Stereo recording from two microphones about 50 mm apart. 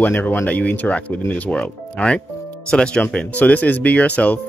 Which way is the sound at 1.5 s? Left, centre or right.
Centre.